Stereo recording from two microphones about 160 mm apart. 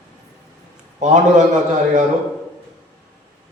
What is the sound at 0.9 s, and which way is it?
Speech, 50° right (ahead or behind).